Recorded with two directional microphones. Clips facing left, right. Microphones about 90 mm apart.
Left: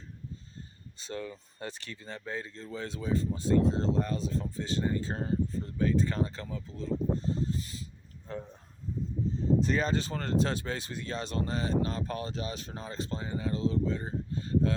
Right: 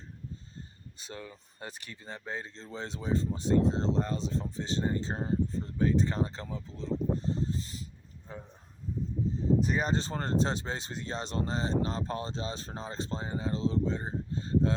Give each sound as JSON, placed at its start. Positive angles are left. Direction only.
{"t": 0.9, "sound": "speech", "side_deg": -10}
{"t": 8.3, "sound": "speech", "side_deg": -15}
{"t": 9.6, "sound": "speech", "side_deg": -15}
{"t": 9.9, "sound": "speech", "side_deg": -30}